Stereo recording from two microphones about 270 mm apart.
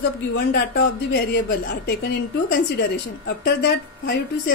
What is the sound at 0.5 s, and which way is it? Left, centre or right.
A woman's voice, left.